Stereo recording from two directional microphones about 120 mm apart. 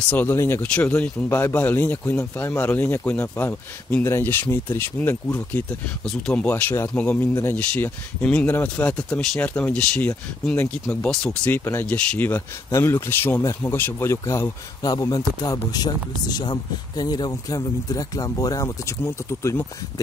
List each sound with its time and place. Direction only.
0.1 s speech: 20° left (ahead or behind)
11.1 s speech: 5° left (ahead or behind)
11.5 s a man's voice: 20° left (ahead or behind)